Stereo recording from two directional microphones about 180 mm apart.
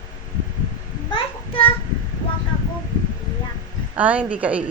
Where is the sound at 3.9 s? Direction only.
10° right (ahead or behind).